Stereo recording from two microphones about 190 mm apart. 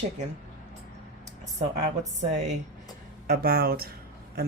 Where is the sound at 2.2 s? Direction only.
40° right (ahead or behind).